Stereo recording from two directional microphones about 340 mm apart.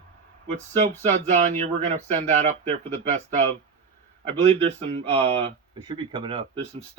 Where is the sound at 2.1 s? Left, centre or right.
Centre.